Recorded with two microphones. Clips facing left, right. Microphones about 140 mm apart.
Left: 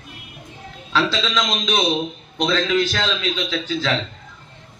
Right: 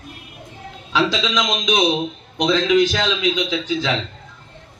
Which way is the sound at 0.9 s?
15° right (ahead or behind).